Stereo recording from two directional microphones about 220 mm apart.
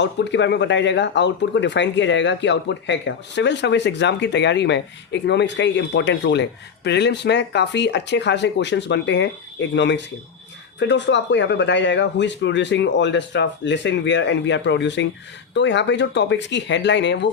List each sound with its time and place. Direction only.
0.0 s speech: 55° left (ahead or behind)